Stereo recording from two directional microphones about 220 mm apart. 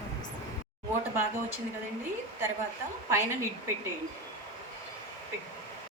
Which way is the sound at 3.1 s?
10° right (ahead or behind).